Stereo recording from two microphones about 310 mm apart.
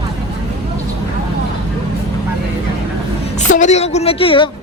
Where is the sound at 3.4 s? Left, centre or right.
Left.